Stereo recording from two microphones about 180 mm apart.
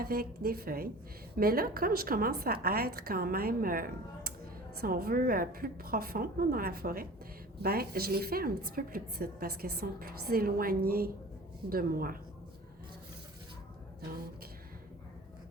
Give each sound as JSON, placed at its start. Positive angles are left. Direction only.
{"t": 0.0, "sound": "a woman's voice", "side_deg": -60}